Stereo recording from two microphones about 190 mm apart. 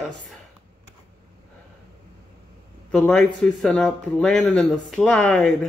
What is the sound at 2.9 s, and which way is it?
Speech, 5° left (ahead or behind).